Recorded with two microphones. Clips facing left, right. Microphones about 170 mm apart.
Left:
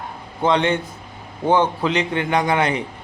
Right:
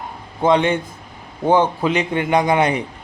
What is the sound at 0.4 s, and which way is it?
Speech, 10° right (ahead or behind).